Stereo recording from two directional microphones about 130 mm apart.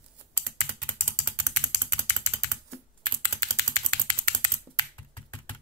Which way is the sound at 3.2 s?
25° left (ahead or behind).